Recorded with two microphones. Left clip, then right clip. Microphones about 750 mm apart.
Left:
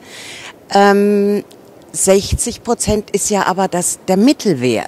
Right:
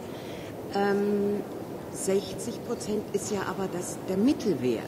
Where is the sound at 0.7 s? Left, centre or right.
Left.